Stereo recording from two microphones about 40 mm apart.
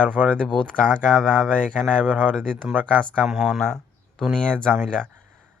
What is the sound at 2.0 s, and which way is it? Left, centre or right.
Speech, right.